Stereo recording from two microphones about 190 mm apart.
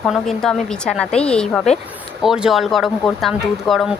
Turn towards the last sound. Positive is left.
turn(degrees=0)  # may be behind; listen again after turning